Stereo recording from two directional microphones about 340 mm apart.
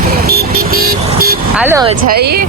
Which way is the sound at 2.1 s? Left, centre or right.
Right.